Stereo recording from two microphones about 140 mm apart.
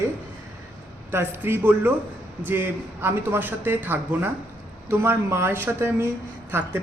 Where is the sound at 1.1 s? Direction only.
15° right (ahead or behind).